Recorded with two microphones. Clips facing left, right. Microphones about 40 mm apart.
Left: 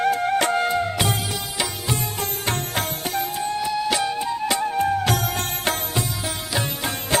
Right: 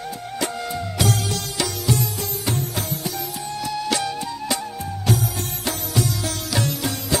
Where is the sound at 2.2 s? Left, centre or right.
Left.